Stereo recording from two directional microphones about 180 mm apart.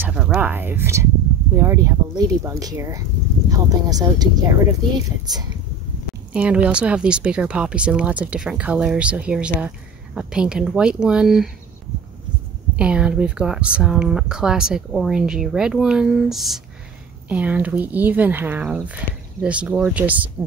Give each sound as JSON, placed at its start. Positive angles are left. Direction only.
{"t": 0.0, "sound": "speech", "side_deg": -5}
{"t": 6.3, "sound": "speech", "side_deg": -5}
{"t": 12.7, "sound": "speech", "side_deg": -5}